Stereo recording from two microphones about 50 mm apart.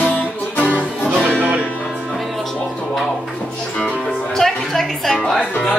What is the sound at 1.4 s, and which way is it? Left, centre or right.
Music, right.